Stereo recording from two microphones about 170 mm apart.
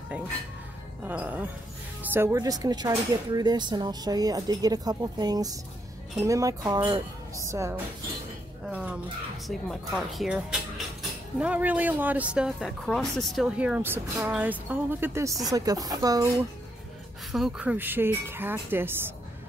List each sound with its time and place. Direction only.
1.0 s speech: 10° right (ahead or behind)
8.6 s a sound: 10° right (ahead or behind)
9.5 s speech: centre (ahead or behind); by 16.4 s 20° right (ahead or behind)
17.3 s speech: 5° right (ahead or behind)